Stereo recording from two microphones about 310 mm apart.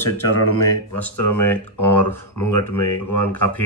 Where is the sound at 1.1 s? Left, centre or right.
Left.